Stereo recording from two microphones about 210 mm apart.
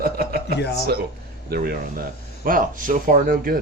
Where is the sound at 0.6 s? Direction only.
50° left (ahead or behind).